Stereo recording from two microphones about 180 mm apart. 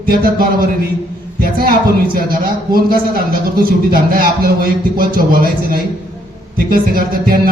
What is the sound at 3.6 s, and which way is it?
Speech, 55° right (ahead or behind).